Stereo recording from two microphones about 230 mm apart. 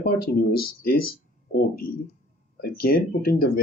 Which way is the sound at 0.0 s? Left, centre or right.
Left.